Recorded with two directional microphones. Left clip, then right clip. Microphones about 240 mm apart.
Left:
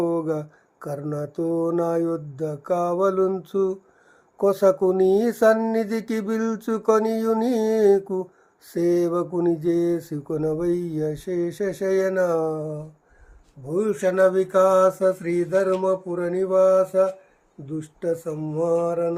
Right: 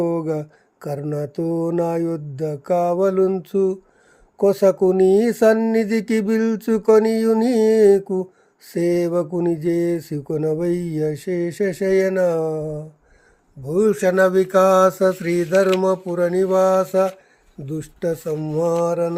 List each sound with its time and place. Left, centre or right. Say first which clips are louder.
0.0 s speech: right 2 dB; right